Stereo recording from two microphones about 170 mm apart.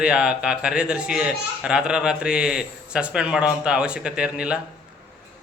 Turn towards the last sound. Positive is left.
turn(degrees=-5)  # may be behind; listen again after turning